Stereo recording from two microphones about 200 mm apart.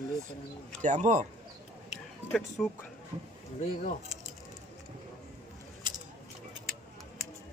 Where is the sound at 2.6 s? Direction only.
5° left (ahead or behind).